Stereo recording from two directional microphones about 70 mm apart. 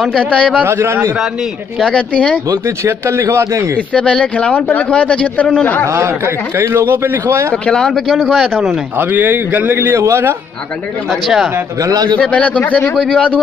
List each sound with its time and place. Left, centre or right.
0.3 s speech: centre
0.7 s a man's voice: right
1.8 s speech: centre
2.8 s a man's voice: right
3.9 s speech: centre
5.9 s a man's voice: right
7.6 s speech: centre
8.9 s speech: right
9.8 s a man's voice: right
11.1 s speech: centre
11.8 s a man's voice: right
12.3 s speech: centre